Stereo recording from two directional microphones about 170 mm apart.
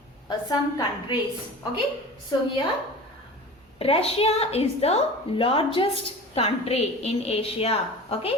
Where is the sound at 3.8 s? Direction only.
35° left (ahead or behind).